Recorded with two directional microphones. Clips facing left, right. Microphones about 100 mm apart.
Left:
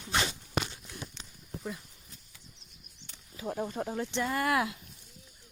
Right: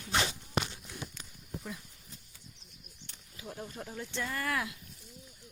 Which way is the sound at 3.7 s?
45° left (ahead or behind).